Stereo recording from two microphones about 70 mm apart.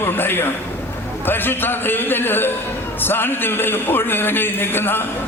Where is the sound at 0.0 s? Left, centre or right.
Left.